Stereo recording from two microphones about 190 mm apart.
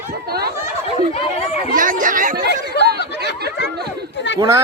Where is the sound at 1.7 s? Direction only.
45° right (ahead or behind).